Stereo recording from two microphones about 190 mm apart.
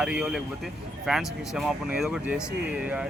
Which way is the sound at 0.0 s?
5° right (ahead or behind).